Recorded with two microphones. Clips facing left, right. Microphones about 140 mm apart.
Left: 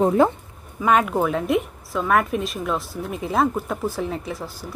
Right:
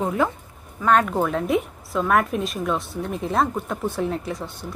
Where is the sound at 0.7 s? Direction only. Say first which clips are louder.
Even; 10° left (ahead or behind).